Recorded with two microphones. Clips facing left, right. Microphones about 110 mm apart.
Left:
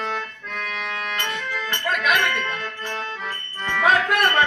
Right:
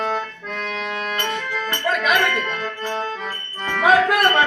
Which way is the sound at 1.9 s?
Centre (ahead or behind).